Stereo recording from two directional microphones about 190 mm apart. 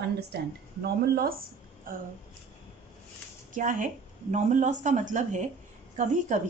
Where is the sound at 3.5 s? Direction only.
45° right (ahead or behind).